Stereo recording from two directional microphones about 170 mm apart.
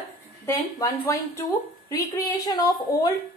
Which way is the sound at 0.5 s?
20° left (ahead or behind).